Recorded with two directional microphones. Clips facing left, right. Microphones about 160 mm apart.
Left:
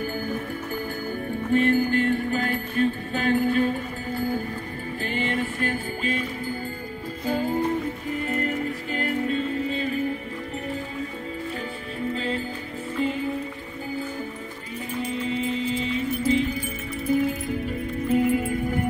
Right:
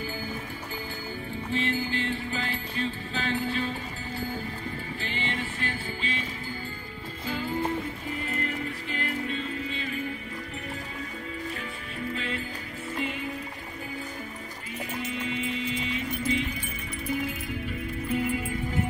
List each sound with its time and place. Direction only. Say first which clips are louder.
0.0 s music: left 6 dB; 50° left (ahead or behind)
1.5 s music: left 9 dB; 50° left (ahead or behind)
7.2 s music: left 6 dB; 45° left (ahead or behind)
12.1 s music: left 6 dB; 35° left (ahead or behind)
15.0 s music: left 6 dB; 35° left (ahead or behind); by 18.9 s 50° left (ahead or behind)